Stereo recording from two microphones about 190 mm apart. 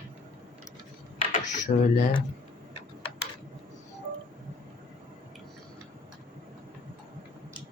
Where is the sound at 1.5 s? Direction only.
40° left (ahead or behind).